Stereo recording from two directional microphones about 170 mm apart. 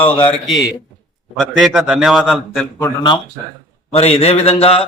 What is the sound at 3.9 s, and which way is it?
Speech, 40° left (ahead or behind).